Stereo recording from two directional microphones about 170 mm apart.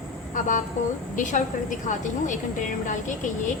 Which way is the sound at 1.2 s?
50° left (ahead or behind).